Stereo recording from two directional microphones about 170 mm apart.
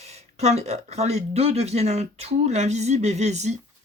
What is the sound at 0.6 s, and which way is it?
Speech, 40° right (ahead or behind).